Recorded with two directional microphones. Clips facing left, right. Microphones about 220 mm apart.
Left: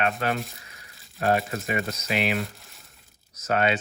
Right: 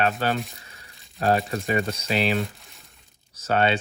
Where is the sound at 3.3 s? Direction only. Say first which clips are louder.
Right 2 dB; 30° right (ahead or behind).